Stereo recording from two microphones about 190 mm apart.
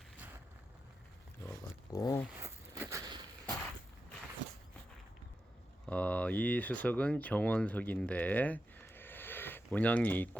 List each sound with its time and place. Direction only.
1.9 s speech: 15° left (ahead or behind)
2.4 s a sound: 15° right (ahead or behind)
5.8 s speech: 5° left (ahead or behind)